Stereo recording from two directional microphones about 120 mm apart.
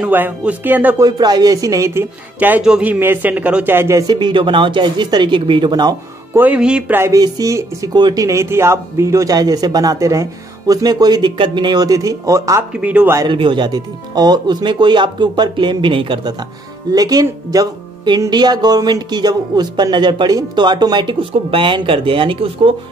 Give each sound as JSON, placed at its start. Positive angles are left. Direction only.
{"t": 0.0, "sound": "a man's voice", "side_deg": -15}
{"t": 0.9, "sound": "a man's voice", "side_deg": -35}
{"t": 4.1, "sound": "speech", "side_deg": -40}
{"t": 6.3, "sound": "a man's voice", "side_deg": -10}
{"t": 7.0, "sound": "speech", "side_deg": -30}
{"t": 12.8, "sound": "a man's voice", "side_deg": -10}
{"t": 13.3, "sound": "speech", "side_deg": -45}
{"t": 16.9, "sound": "speech", "side_deg": -30}